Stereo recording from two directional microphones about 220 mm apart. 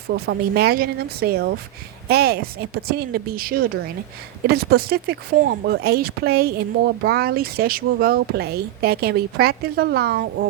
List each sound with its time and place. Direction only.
0.1 s speech: 45° right (ahead or behind)